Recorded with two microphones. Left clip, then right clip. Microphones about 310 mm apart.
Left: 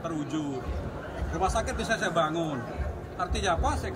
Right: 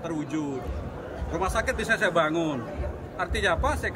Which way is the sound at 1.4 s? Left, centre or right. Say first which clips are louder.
Right 1 dB; centre.